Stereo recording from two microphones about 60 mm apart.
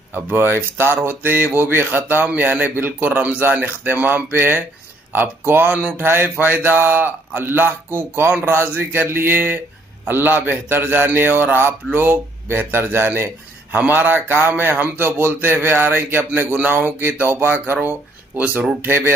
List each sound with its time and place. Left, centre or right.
0.1 s a man's voice: right
18.8 s a man's voice: right